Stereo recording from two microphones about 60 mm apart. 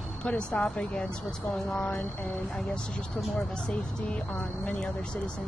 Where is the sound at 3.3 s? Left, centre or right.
Centre.